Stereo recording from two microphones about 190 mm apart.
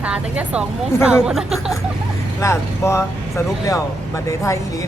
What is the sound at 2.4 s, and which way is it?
Speech, 15° left (ahead or behind).